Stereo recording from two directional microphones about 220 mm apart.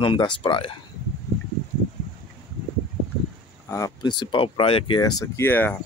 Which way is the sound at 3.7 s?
15° left (ahead or behind).